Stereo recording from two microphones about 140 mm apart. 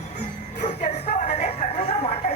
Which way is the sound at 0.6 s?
60° left (ahead or behind).